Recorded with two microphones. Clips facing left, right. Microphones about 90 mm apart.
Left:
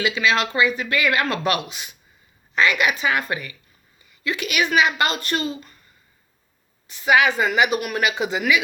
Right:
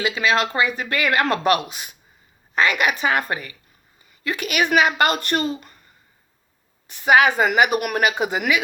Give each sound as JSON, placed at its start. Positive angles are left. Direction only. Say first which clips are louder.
{"t": 0.0, "sound": "speech", "louder": "right 1 dB", "side_deg": -40}
{"t": 6.8, "sound": "speech", "louder": "right 2 dB", "side_deg": -50}